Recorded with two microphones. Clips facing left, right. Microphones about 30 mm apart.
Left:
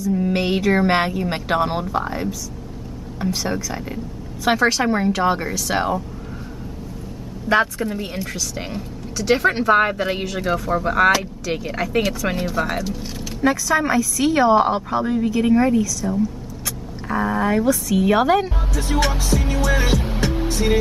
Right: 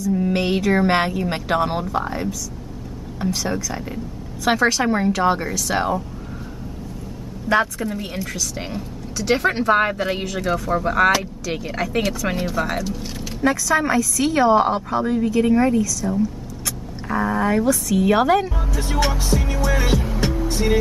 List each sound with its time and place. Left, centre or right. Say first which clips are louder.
0.0 s speech: even; centre
7.4 s speech: left 1 dB; centre
19.9 s music: even; centre